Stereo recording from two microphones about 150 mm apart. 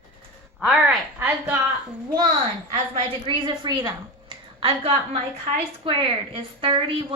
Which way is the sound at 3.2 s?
30° right (ahead or behind).